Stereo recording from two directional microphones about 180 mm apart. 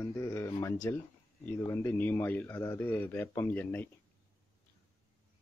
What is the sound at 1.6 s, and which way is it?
Speech, 15° left (ahead or behind).